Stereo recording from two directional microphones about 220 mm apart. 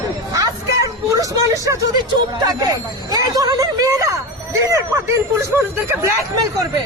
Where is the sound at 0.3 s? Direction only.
15° right (ahead or behind).